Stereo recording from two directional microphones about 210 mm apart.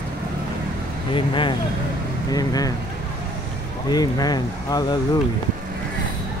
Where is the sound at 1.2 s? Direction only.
25° left (ahead or behind).